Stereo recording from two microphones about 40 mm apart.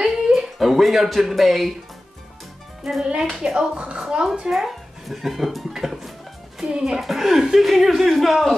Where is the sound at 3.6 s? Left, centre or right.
Right.